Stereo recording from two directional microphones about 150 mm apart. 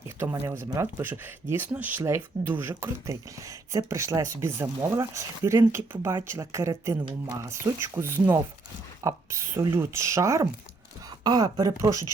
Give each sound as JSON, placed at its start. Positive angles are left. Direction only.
{"t": 0.2, "sound": "speech", "side_deg": -15}
{"t": 6.9, "sound": "speech", "side_deg": -30}
{"t": 7.5, "sound": "speech", "side_deg": -15}